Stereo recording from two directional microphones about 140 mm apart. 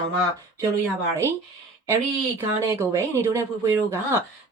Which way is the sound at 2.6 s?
20° right (ahead or behind).